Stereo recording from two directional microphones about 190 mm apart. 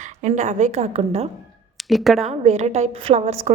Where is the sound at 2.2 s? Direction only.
35° right (ahead or behind).